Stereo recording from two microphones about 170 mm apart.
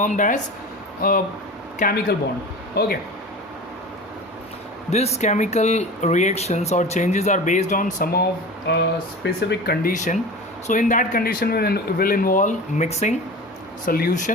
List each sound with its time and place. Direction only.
0.0 s speech: 50° left (ahead or behind); by 2.9 s 65° left (ahead or behind)
4.9 s speech: 40° left (ahead or behind)
8.1 s speech: 75° left (ahead or behind)
9.9 s speech: 45° left (ahead or behind)
13.8 s speech: 55° left (ahead or behind)